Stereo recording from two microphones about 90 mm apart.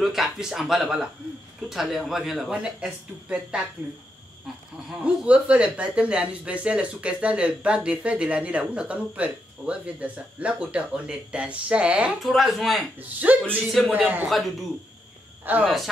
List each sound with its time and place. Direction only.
0.0 s speech: 5° right (ahead or behind)
5.0 s speech: 15° right (ahead or behind)
12.2 s speech: centre (ahead or behind)
13.2 s speech: 15° right (ahead or behind)
14.2 s speech: centre (ahead or behind)
15.6 s speech: centre (ahead or behind)